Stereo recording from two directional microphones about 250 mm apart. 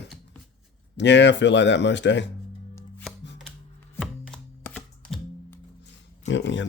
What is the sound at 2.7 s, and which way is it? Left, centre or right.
Music, centre.